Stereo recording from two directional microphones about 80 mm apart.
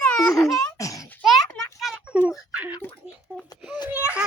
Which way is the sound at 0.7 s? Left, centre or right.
Left.